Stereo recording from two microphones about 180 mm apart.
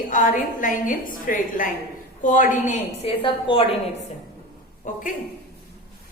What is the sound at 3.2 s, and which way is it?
Speech, 30° left (ahead or behind).